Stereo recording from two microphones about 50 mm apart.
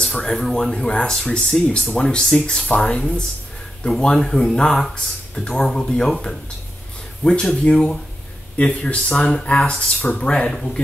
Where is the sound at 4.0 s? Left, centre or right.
Centre.